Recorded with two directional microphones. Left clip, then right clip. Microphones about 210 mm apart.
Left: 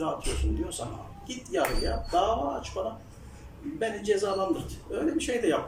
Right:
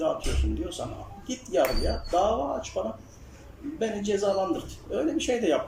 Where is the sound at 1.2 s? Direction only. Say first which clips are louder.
Right 4 dB; 15° right (ahead or behind).